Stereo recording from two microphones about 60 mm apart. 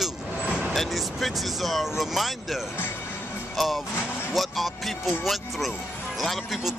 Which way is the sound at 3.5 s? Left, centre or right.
Centre.